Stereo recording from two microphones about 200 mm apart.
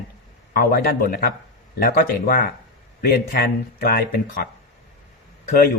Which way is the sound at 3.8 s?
45° left (ahead or behind).